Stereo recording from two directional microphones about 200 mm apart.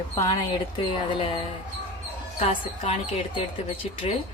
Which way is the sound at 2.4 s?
30° left (ahead or behind).